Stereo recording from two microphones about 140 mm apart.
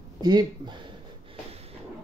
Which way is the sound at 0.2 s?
30° right (ahead or behind).